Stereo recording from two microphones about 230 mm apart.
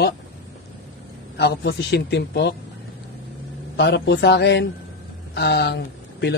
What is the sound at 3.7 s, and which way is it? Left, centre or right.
A man's voice, left.